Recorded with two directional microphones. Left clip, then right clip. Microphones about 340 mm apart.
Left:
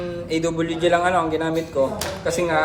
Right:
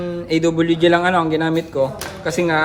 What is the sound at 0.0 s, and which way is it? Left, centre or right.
Speech, centre.